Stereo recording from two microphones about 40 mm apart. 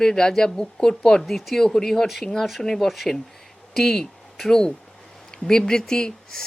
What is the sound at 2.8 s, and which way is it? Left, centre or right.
Speech, centre.